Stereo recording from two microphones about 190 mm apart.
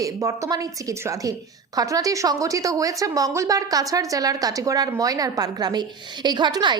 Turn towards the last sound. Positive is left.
turn(degrees=-25)  # may be behind; listen again after turning